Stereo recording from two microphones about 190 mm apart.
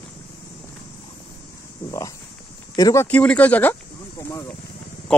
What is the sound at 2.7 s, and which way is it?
Speech, 15° left (ahead or behind).